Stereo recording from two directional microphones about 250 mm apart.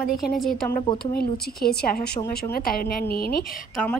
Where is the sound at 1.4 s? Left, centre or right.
Left.